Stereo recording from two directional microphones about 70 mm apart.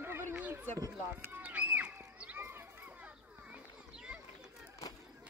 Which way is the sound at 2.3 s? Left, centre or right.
Right.